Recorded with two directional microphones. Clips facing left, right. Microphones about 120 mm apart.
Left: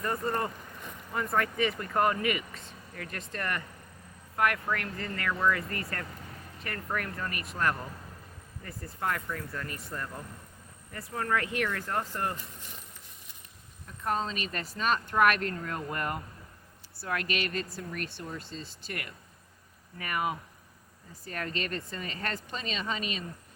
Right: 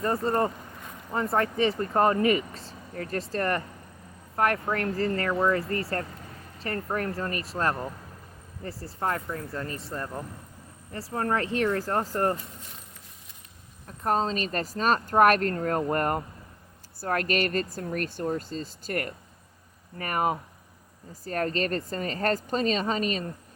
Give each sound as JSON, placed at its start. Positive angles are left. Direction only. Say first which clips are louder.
{"t": 0.0, "sound": "speech", "louder": "right 6 dB", "side_deg": -30}
{"t": 13.8, "sound": "speech", "louder": "right 5 dB", "side_deg": -40}